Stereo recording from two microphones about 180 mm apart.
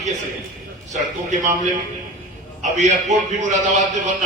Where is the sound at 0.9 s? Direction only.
40° right (ahead or behind).